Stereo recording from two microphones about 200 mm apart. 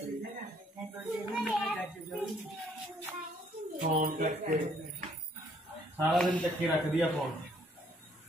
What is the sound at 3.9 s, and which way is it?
Speech, 45° right (ahead or behind).